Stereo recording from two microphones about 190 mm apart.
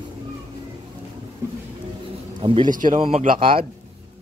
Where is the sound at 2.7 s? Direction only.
45° right (ahead or behind); by 3.6 s 30° right (ahead or behind).